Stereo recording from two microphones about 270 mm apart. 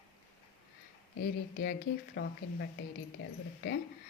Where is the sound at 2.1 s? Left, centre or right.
Left.